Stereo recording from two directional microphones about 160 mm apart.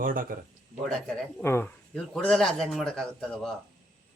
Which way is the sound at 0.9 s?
5° left (ahead or behind).